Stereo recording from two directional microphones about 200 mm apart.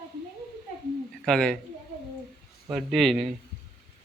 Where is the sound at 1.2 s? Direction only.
5° left (ahead or behind).